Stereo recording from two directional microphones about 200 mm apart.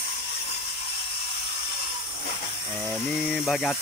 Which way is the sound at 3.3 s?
Centre (ahead or behind).